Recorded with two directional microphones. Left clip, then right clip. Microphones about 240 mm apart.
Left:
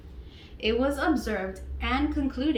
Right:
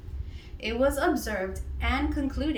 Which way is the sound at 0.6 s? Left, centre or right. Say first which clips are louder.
Even; centre.